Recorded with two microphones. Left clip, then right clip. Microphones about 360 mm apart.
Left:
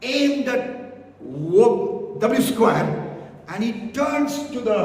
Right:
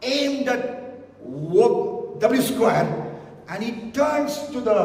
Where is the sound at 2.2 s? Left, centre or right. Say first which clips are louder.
Left 1 dB; centre.